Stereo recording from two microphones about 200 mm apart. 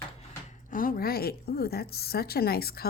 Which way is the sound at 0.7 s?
45° left (ahead or behind).